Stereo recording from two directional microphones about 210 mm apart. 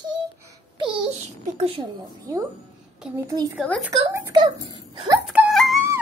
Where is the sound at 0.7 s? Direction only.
25° right (ahead or behind).